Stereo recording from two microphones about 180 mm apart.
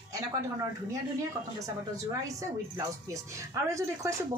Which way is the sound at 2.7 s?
15° right (ahead or behind).